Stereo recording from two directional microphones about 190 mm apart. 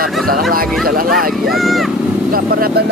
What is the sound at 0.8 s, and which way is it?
Speech, 50° right (ahead or behind).